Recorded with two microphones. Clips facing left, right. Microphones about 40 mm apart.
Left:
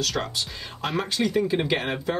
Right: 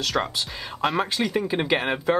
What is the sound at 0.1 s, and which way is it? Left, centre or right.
Speech, centre.